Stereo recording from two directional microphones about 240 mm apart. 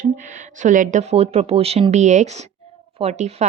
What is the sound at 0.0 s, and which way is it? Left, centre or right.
A woman's voice, right.